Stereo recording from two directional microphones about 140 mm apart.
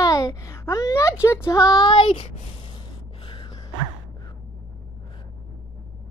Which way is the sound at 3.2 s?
40° left (ahead or behind).